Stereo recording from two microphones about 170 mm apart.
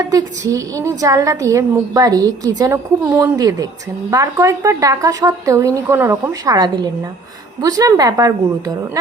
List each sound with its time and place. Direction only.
0.0 s a woman's voice: 20° right (ahead or behind)